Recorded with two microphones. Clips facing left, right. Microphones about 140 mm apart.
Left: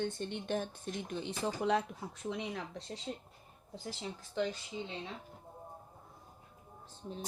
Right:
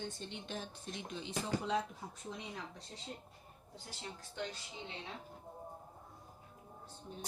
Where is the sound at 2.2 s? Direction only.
75° left (ahead or behind).